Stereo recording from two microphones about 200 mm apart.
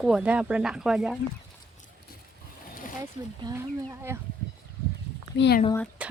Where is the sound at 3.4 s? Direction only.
15° right (ahead or behind).